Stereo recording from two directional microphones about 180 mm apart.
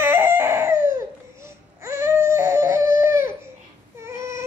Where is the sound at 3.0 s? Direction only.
15° right (ahead or behind).